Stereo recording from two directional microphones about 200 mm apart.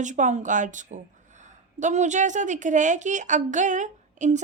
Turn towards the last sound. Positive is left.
turn(degrees=-35)  # may be behind; listen again after turning